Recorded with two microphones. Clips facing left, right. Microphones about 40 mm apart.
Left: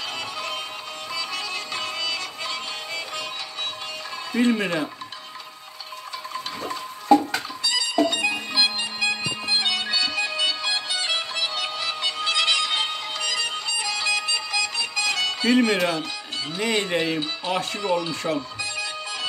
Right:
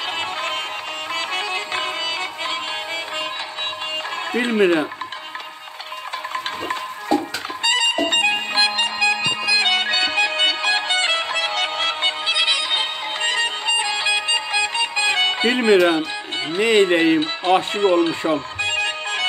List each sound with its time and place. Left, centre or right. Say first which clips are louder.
0.0 s music: right 6 dB; right
7.6 s music: right 4 dB; right
8.6 s music: right 6 dB; right
9.6 s music: right 3 dB; right
12.3 s music: even; centre
13.2 s music: right 7 dB; right